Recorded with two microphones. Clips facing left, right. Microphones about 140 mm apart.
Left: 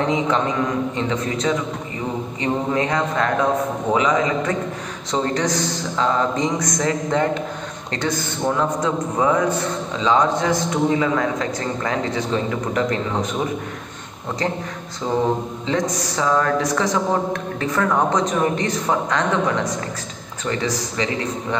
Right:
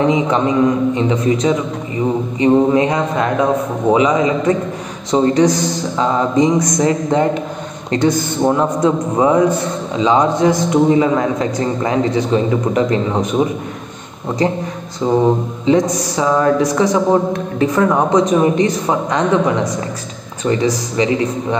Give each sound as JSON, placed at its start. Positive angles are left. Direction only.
{"t": 0.0, "sound": "a man's voice", "side_deg": -15}
{"t": 15.6, "sound": "a man's voice", "side_deg": -15}